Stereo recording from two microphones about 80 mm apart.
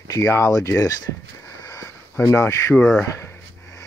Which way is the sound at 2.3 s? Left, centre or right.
Left.